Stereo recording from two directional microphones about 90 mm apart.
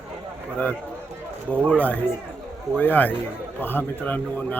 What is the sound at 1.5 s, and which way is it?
A man's voice, 15° left (ahead or behind).